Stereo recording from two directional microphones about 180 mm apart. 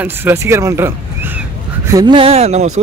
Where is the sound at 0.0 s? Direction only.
15° right (ahead or behind).